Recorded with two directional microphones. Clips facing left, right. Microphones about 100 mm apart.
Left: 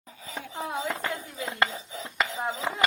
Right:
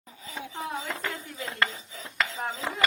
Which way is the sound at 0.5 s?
20° left (ahead or behind).